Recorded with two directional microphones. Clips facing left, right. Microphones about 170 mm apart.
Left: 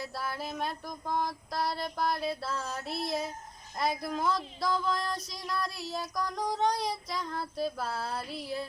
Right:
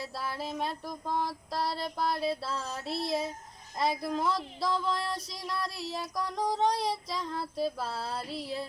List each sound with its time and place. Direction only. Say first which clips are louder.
0.3 s female singing: right 2 dB; 25° right (ahead or behind)
0.9 s child singing: even; centre (ahead or behind)
1.6 s female singing: even; 30° right (ahead or behind)
2.0 s child singing: right 1 dB; centre (ahead or behind)
2.3 s female singing: even; 30° right (ahead or behind)
3.8 s child singing: right 1 dB; centre (ahead or behind)
4.9 s female singing: even; 30° right (ahead or behind)
5.8 s child singing: even; centre (ahead or behind)
6.7 s female singing: right 1 dB; 30° right (ahead or behind)
6.9 s child singing: right 1 dB; centre (ahead or behind)
8.1 s female singing: even; 25° right (ahead or behind)